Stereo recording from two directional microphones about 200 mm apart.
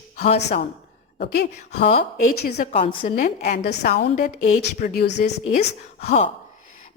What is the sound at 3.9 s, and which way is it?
A woman's voice, 40° left (ahead or behind).